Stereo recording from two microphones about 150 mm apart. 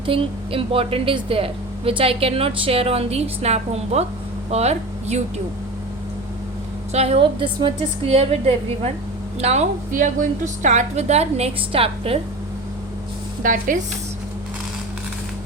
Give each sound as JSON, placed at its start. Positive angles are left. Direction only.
{"t": 0.0, "sound": "a woman's voice", "side_deg": -35}
{"t": 6.9, "sound": "a woman's voice", "side_deg": -45}
{"t": 13.4, "sound": "speech", "side_deg": -65}